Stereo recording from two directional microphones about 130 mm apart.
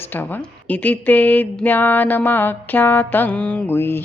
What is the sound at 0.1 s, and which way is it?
Speech, 15° left (ahead or behind).